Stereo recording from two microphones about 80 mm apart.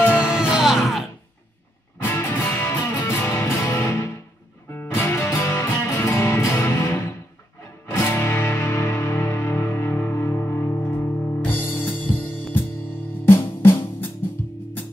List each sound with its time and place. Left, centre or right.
0.2 s music: centre
2.0 s music: left
8.1 s music: left
13.2 s drum: left